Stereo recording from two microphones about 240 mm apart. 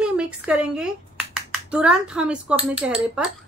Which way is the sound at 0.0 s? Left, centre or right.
Centre.